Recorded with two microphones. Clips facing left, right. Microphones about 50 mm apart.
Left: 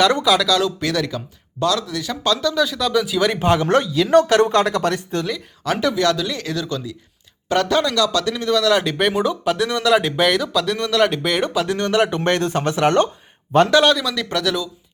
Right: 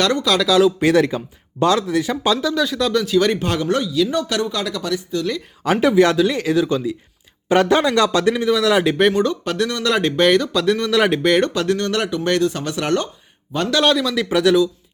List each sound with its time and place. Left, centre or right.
0.3 s speech: centre
0.8 s speech: right; by 3.3 s centre
3.3 s speech: left
3.7 s speech: left
5.7 s speech: centre
9.1 s speech: centre
11.8 s speech: centre
12.1 s speech: left
13.8 s speech: centre